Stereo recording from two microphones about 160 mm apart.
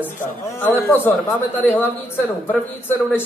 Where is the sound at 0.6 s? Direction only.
10° left (ahead or behind).